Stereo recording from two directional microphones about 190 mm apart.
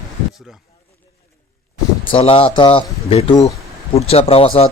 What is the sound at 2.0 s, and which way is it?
A man's voice, 25° left (ahead or behind).